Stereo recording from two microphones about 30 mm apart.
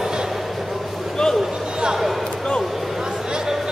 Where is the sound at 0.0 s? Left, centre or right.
Right.